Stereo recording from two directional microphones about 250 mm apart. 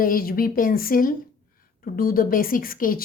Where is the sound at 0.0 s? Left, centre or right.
Left.